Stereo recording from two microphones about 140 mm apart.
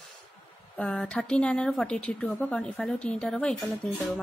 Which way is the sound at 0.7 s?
5° left (ahead or behind).